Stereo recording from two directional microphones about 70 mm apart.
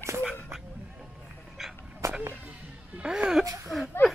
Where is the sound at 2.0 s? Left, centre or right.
Right.